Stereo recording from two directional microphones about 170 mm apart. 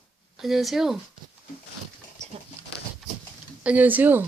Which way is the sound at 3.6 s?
10° right (ahead or behind).